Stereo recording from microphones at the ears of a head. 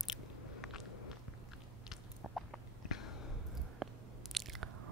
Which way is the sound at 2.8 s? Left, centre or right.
Left.